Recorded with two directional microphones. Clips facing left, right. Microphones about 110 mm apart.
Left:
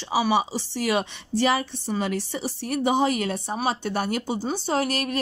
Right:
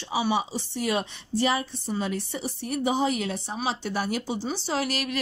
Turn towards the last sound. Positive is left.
turn(degrees=45)  # may be behind; listen again after turning